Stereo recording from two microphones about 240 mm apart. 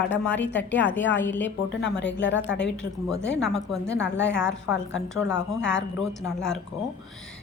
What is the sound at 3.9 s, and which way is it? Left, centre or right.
Speech, left.